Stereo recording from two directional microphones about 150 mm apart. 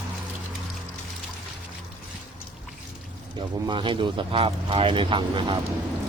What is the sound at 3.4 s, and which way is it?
Speech, 30° right (ahead or behind).